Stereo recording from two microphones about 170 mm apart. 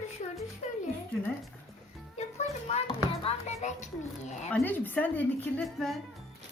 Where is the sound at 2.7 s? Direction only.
35° left (ahead or behind).